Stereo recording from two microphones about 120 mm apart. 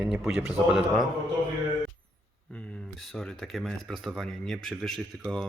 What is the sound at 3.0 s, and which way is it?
Speech, 5° left (ahead or behind).